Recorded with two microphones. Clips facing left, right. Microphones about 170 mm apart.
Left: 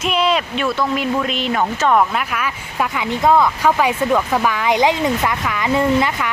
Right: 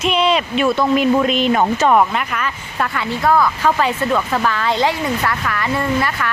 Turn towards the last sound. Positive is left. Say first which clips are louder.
# left 3 dB
turn(degrees=15)  # may be behind; listen again after turning